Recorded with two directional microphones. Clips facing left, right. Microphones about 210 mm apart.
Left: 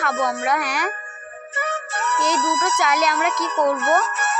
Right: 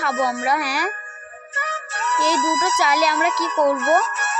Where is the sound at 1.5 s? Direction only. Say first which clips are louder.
Left 4 dB; 55° left (ahead or behind).